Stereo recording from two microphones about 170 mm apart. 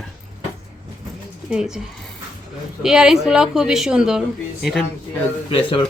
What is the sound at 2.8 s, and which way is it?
Speech, 5° right (ahead or behind).